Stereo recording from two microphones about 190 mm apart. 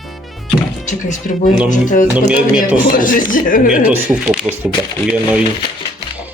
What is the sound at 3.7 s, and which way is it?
Speech, 5° right (ahead or behind).